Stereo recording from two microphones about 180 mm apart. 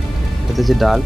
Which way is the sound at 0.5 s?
Centre (ahead or behind).